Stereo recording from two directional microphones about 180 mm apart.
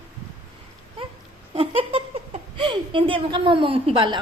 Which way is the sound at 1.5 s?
30° right (ahead or behind).